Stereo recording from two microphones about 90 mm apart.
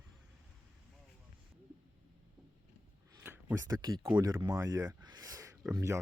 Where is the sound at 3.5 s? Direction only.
45° right (ahead or behind).